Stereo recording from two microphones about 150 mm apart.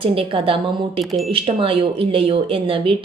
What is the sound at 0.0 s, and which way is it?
A woman's voice, 40° right (ahead or behind).